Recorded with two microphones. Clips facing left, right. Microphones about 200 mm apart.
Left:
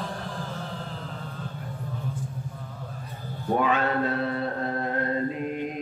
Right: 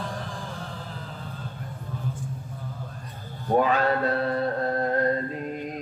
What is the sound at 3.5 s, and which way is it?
Mantra, 35° right (ahead or behind).